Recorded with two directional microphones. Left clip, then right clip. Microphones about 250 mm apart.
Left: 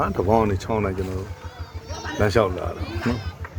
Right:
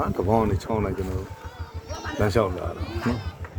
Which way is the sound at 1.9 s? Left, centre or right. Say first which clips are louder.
Left 1 dB; left.